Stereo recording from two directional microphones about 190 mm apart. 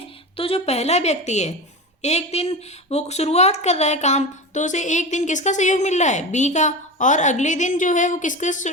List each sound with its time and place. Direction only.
0.3 s speech: 30° left (ahead or behind)